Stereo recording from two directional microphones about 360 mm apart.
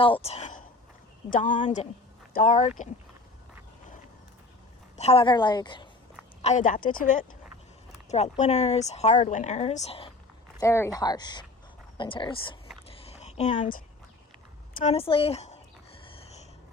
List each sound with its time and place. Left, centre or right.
0.0 s speech: centre
4.9 s a woman's voice: centre
12.9 s a sound: centre
14.8 s a woman's voice: centre